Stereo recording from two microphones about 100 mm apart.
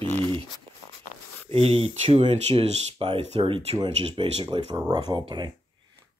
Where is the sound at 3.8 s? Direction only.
55° right (ahead or behind).